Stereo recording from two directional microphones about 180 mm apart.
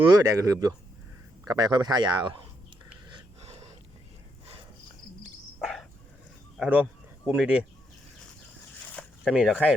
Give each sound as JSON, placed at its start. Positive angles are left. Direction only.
{"t": 0.2, "sound": "speech", "side_deg": -20}
{"t": 3.4, "sound": "a sound", "side_deg": -35}
{"t": 5.5, "sound": "cricket", "side_deg": 0}
{"t": 6.6, "sound": "speech", "side_deg": -10}
{"t": 9.2, "sound": "speech", "side_deg": -5}